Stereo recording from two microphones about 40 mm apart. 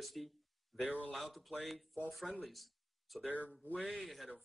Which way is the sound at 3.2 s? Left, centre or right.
Left.